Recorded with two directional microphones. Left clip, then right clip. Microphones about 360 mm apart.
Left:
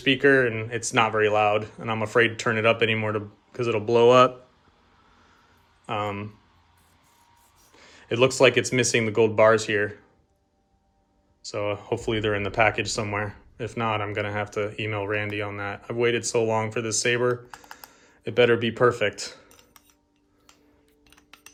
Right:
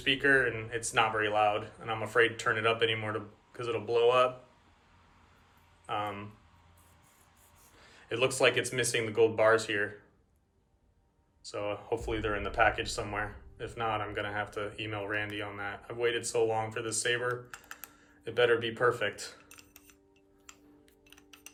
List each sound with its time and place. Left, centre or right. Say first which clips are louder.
0.0 s speech: left 7 dB; centre
5.8 s speech: left 6 dB; centre
7.8 s speech: left 9 dB; centre
11.4 s speech: left 7 dB; centre